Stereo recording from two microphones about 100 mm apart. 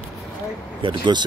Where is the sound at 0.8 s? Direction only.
50° right (ahead or behind).